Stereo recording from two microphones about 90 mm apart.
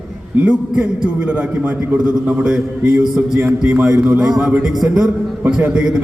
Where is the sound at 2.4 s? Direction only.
15° right (ahead or behind).